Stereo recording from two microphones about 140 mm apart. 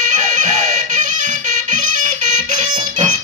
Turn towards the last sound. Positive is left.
turn(degrees=-65)  # may be behind; listen again after turning